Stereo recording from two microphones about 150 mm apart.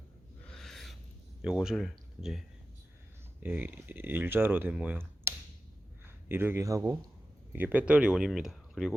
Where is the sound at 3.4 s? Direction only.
15° right (ahead or behind).